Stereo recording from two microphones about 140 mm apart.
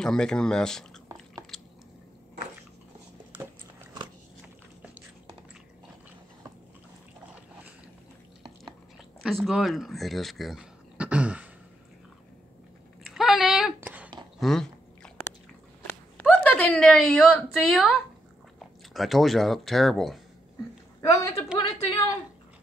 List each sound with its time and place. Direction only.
0.0 s speech: 5° left (ahead or behind)
9.2 s speech: centre (ahead or behind)
13.0 s a sound: centre (ahead or behind)
14.4 s speech: 5° left (ahead or behind)
15.9 s a sound: 15° left (ahead or behind)
18.9 s speech: centre (ahead or behind)
21.0 s a woman's voice: 20° left (ahead or behind)